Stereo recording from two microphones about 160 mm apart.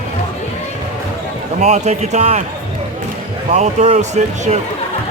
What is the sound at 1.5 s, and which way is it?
Speech, 45° right (ahead or behind).